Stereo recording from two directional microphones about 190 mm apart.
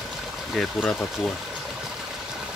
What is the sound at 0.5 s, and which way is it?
Speech, 5° left (ahead or behind).